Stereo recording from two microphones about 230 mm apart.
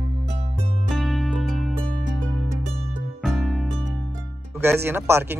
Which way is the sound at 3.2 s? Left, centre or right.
Centre.